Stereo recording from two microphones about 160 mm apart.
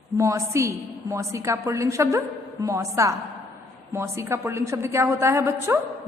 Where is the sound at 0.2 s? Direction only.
20° right (ahead or behind).